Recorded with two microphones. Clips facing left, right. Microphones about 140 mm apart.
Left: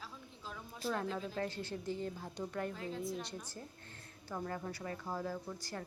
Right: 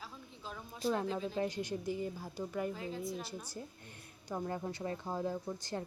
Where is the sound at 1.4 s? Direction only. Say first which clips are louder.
Right 4 dB; 15° right (ahead or behind).